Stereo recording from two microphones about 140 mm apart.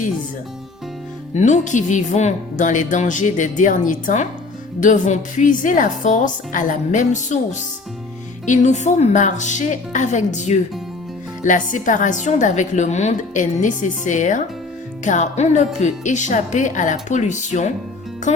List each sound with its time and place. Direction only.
1.4 s a woman's voice: 60° left (ahead or behind)